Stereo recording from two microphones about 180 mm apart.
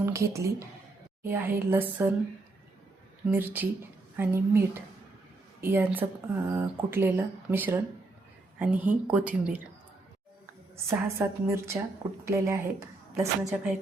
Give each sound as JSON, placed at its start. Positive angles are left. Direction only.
{"t": 0.0, "sound": "speech", "side_deg": -15}
{"t": 3.2, "sound": "speech", "side_deg": -10}
{"t": 10.8, "sound": "speech", "side_deg": -15}